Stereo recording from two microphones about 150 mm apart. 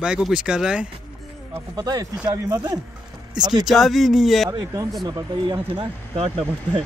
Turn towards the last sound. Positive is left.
turn(degrees=-40)  # may be behind; listen again after turning